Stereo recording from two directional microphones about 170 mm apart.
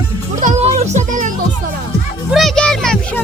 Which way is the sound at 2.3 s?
Centre (ahead or behind).